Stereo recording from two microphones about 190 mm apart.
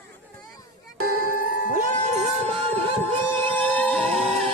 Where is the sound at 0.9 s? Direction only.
50° right (ahead or behind).